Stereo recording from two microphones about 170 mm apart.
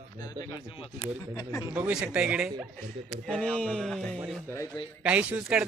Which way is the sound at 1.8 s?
5° right (ahead or behind).